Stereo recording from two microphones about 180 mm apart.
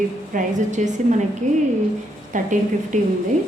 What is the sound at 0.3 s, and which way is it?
A woman's voice, 40° right (ahead or behind).